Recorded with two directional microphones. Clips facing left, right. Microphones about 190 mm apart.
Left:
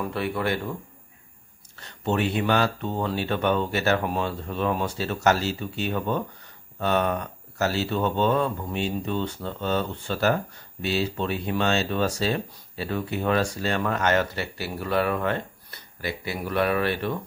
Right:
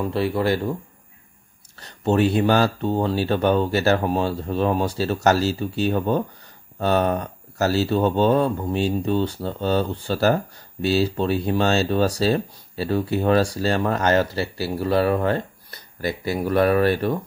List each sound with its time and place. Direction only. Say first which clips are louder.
0.0 s speech: right 5 dB; 30° right (ahead or behind)
1.8 s speech: right 6 dB; 35° right (ahead or behind)